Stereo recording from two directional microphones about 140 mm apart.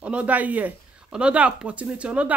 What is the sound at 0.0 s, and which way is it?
Speech, 10° right (ahead or behind).